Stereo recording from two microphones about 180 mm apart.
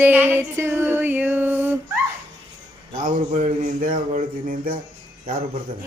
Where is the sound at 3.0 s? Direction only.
45° right (ahead or behind).